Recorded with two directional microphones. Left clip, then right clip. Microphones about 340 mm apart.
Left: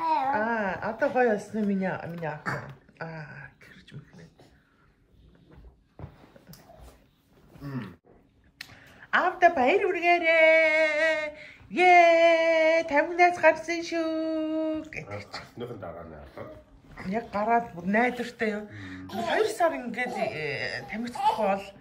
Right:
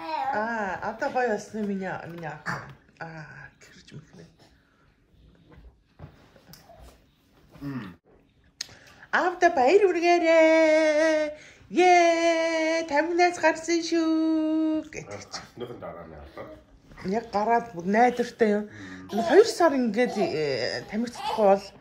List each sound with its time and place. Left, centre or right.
0.3 s speech: centre
7.6 s a sound: centre
8.5 s a woman's voice: centre
21.1 s speech: centre